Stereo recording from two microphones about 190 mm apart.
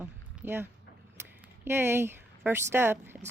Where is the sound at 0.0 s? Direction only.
10° right (ahead or behind).